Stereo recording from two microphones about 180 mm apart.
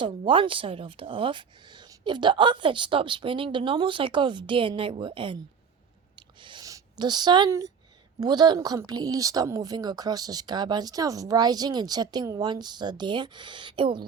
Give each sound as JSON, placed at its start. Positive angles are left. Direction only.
{"t": 0.0, "sound": "speech", "side_deg": -30}
{"t": 6.1, "sound": "a sound", "side_deg": -25}
{"t": 8.2, "sound": "speech", "side_deg": -25}